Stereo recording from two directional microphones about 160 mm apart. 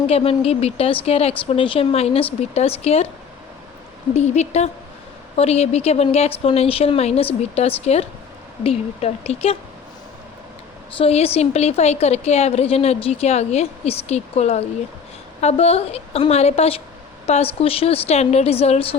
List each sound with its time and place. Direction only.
0.1 s a woman's voice: 40° left (ahead or behind)
4.1 s a woman's voice: 45° left (ahead or behind)
10.9 s a woman's voice: 40° left (ahead or behind)